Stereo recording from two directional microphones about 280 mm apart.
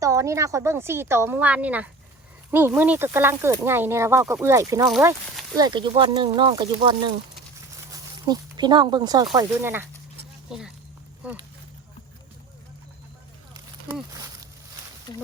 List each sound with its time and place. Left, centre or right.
0.0 s speech: centre
8.2 s speech: centre
15.1 s speech: centre